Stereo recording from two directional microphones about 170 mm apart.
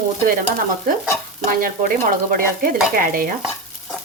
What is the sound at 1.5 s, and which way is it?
Speech, 55° right (ahead or behind).